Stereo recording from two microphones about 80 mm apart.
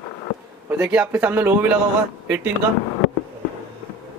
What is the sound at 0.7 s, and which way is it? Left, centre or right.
A man's voice, centre.